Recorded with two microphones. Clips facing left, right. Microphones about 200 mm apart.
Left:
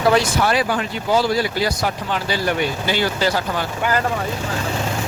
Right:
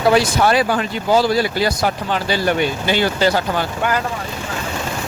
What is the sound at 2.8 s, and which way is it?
Speech, 20° right (ahead or behind).